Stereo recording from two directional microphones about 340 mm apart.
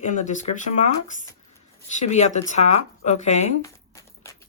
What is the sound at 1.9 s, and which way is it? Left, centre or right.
Speech, centre.